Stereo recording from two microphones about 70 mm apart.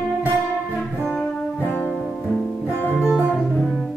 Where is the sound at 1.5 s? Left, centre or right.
Left.